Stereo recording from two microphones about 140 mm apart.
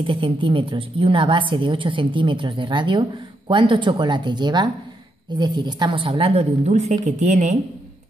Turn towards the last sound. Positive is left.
turn(degrees=-55)  # may be behind; listen again after turning